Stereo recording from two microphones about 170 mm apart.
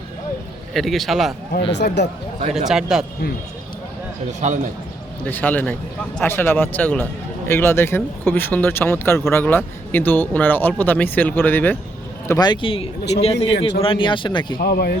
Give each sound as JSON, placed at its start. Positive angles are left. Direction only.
{"t": 0.7, "sound": "a man's voice", "side_deg": 0}
{"t": 1.7, "sound": "speech", "side_deg": 90}
{"t": 2.6, "sound": "a man's voice", "side_deg": -5}
{"t": 4.4, "sound": "a man's voice", "side_deg": -45}
{"t": 5.2, "sound": "speech", "side_deg": 10}
{"t": 12.3, "sound": "speech", "side_deg": 25}
{"t": 14.6, "sound": "speech", "side_deg": 65}